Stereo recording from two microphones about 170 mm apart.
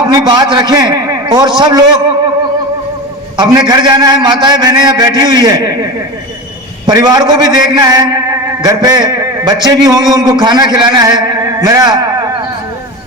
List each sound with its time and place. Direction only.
0.1 s a man's voice: 25° right (ahead or behind)
3.3 s a man's voice: 25° right (ahead or behind)